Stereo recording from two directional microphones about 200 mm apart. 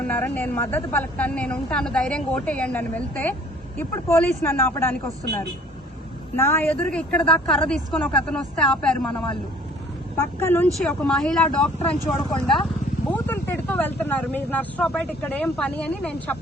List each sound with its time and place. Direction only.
0.1 s speech: 10° left (ahead or behind)
6.3 s speech: 10° left (ahead or behind)
10.4 s speech: 10° left (ahead or behind)